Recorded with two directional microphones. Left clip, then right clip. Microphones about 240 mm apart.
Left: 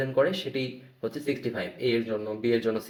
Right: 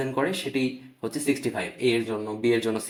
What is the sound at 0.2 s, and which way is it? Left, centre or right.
Speech, right.